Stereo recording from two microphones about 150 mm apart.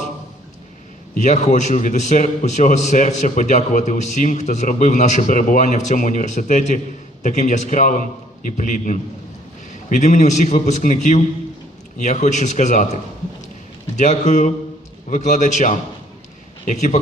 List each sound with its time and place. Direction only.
1.1 s a man's voice: 55° left (ahead or behind)